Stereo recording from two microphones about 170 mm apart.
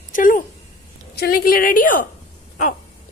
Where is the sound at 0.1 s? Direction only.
50° left (ahead or behind).